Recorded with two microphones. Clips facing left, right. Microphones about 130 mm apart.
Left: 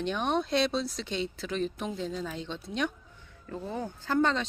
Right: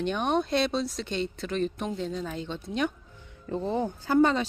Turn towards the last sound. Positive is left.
turn(degrees=-10)  # may be behind; listen again after turning